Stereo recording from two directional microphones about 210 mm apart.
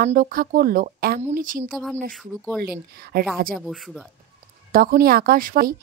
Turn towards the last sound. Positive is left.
turn(degrees=-40)  # may be behind; listen again after turning